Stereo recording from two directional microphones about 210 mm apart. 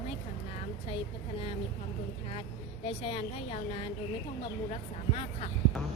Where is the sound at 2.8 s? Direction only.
25° left (ahead or behind).